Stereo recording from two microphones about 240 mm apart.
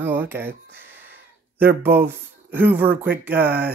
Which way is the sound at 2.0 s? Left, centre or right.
Right.